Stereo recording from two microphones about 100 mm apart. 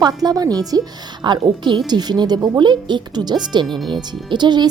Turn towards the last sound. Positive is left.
turn(degrees=-45)  # may be behind; listen again after turning